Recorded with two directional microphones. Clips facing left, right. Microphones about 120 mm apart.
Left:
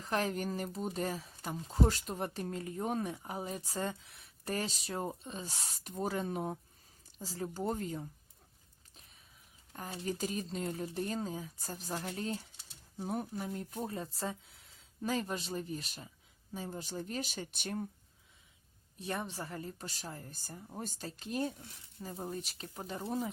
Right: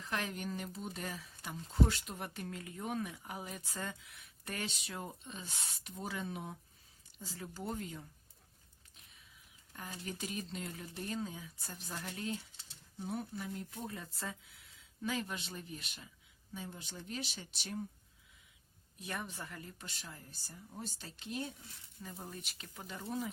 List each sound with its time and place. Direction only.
0.0 s speech: 35° left (ahead or behind)
9.7 s speech: 35° left (ahead or behind); by 17.8 s 50° left (ahead or behind)
18.9 s speech: 30° left (ahead or behind)
22.0 s speech: 30° left (ahead or behind)